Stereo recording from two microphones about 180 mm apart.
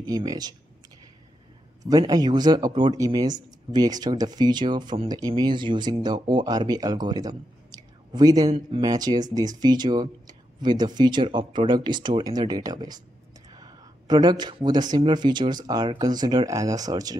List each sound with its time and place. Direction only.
0.0 s speech: 20° right (ahead or behind)
1.9 s speech: 20° right (ahead or behind)